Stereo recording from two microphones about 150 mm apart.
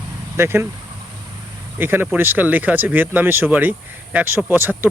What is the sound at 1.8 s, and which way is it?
Speech, 15° right (ahead or behind).